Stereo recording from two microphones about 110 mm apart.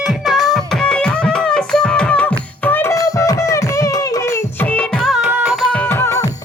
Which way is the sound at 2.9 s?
30° left (ahead or behind).